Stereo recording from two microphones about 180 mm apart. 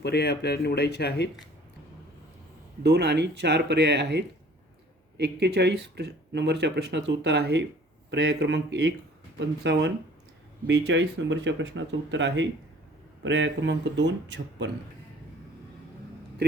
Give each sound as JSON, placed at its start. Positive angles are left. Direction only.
{"t": 0.0, "sound": "speech", "side_deg": 65}
{"t": 2.8, "sound": "speech", "side_deg": -70}